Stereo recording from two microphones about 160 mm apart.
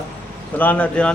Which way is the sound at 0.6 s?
10° left (ahead or behind).